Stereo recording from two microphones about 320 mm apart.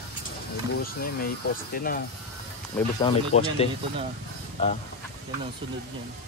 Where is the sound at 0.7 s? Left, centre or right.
Left.